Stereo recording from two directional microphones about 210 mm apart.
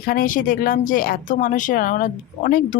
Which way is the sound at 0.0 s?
45° left (ahead or behind).